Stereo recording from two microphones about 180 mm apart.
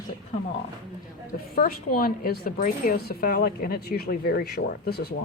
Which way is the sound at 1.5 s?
55° left (ahead or behind).